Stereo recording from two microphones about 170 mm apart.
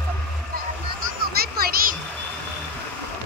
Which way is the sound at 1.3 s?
65° right (ahead or behind).